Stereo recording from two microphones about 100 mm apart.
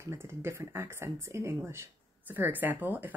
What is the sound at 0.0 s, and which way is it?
Speech, 25° right (ahead or behind).